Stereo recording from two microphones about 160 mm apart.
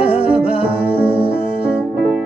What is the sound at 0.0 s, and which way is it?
Music, 40° left (ahead or behind).